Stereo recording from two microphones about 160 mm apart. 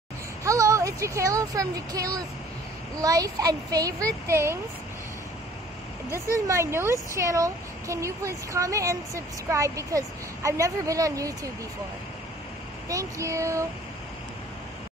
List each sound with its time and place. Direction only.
0.4 s speech: 20° right (ahead or behind)
6.3 s speech: 20° right (ahead or behind)
12.8 s speech: 20° right (ahead or behind)